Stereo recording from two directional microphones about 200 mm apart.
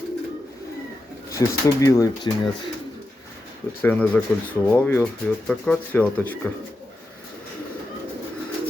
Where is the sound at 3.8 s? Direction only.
10° left (ahead or behind).